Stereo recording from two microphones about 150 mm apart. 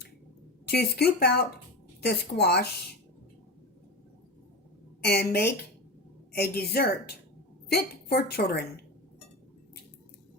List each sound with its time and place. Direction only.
0.6 s a woman's voice: 90° left
5.3 s a woman's voice: 90° left